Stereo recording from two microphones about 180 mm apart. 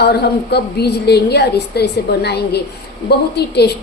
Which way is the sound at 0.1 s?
65° left (ahead or behind).